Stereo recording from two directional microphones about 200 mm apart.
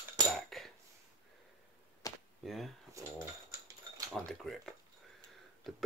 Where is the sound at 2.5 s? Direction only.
Centre (ahead or behind).